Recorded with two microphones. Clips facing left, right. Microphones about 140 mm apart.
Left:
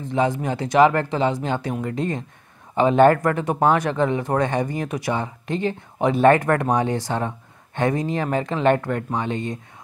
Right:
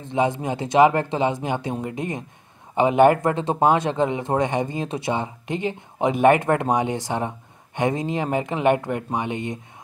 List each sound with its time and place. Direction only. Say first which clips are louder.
0.1 s speech: even; 20° right (ahead or behind)